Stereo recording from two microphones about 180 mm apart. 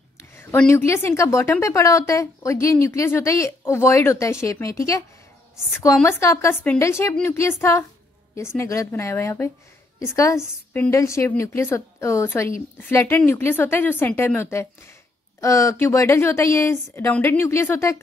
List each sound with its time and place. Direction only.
0.2 s a woman's voice: 15° left (ahead or behind)
6.0 s a woman's voice: 15° left (ahead or behind)